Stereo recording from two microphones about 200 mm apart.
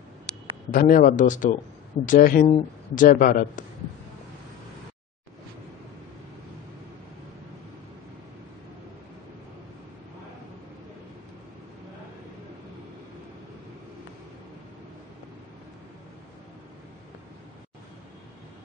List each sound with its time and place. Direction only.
0.7 s speech: 40° left (ahead or behind)